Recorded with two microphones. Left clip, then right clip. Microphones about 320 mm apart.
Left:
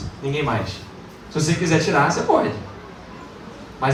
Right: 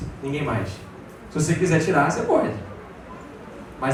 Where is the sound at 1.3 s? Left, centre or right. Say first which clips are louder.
Left 2 dB; centre.